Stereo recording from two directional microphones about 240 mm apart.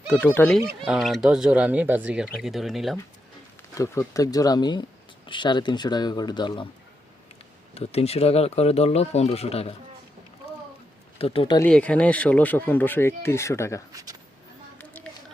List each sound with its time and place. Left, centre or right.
0.1 s speech: centre
3.8 s speech: centre
7.7 s speech: left
11.2 s speech: left
11.6 s speech: centre
13.9 s a sound: centre
14.8 s a sound: centre